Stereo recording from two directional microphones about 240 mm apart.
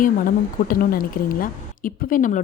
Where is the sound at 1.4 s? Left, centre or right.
Left.